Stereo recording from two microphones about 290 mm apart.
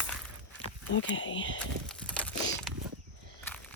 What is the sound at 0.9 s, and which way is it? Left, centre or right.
Speech, left.